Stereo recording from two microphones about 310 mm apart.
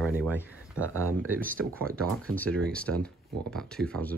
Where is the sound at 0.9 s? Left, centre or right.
Right.